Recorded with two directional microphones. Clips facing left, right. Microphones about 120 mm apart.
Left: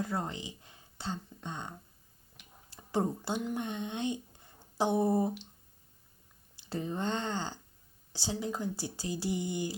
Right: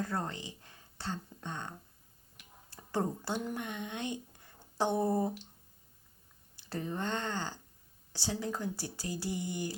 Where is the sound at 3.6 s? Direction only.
25° left (ahead or behind).